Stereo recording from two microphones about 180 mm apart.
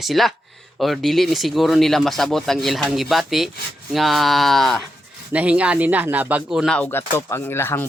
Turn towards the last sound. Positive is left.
turn(degrees=15)  # may be behind; listen again after turning